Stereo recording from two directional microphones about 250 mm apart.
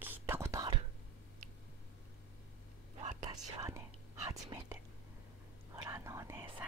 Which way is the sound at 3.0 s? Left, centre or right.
Centre.